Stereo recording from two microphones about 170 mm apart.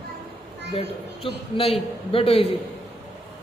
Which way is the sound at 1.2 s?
30° left (ahead or behind).